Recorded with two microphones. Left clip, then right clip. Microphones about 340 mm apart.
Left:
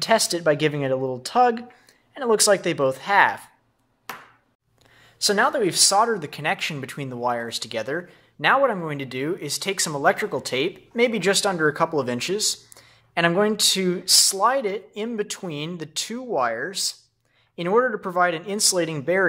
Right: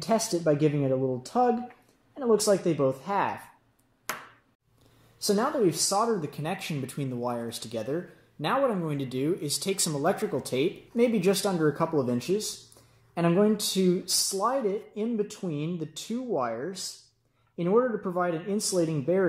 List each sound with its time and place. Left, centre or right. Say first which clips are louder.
0.0 s speech: left 6 dB; left
5.2 s speech: left 5 dB; left